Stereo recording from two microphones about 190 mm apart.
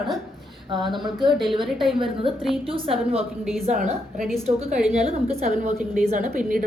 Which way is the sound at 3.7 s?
45° right (ahead or behind).